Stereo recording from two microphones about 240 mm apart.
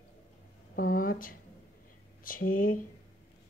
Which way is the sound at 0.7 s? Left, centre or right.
Left.